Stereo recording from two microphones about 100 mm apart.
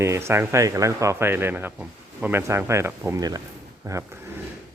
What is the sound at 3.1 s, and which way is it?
Speech, 40° right (ahead or behind).